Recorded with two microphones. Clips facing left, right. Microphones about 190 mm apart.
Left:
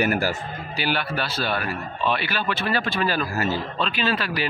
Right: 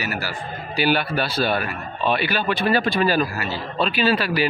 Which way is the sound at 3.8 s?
10° right (ahead or behind).